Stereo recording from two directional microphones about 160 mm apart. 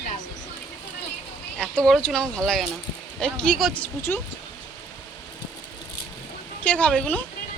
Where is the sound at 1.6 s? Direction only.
5° left (ahead or behind).